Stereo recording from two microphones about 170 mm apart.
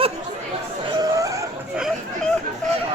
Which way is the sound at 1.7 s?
Centre (ahead or behind).